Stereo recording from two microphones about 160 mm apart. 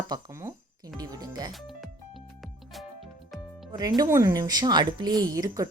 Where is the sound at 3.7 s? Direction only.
25° right (ahead or behind).